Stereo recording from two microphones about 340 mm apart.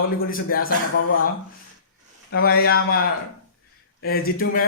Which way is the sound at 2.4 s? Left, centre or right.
Left.